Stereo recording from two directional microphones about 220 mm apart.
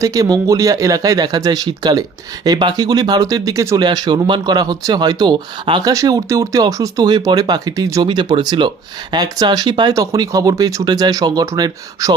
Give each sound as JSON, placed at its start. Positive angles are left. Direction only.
{"t": 0.0, "sound": "speech", "side_deg": -15}